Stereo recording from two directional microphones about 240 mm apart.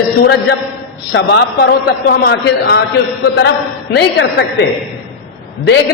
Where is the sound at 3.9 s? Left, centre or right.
Left.